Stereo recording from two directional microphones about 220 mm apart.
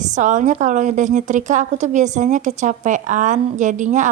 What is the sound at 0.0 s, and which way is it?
A woman's voice, 35° right (ahead or behind).